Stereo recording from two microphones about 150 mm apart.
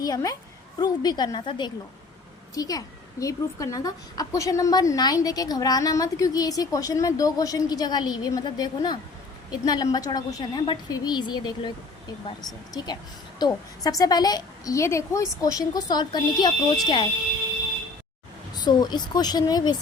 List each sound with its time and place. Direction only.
0.0 s a child's voice: 25° left (ahead or behind)
18.5 s a child's voice: 30° left (ahead or behind)